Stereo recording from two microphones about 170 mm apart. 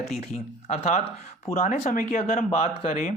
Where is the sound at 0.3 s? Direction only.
40° left (ahead or behind).